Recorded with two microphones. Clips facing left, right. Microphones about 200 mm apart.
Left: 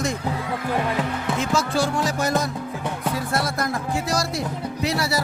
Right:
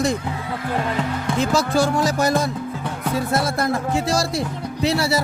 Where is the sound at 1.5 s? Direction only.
40° right (ahead or behind).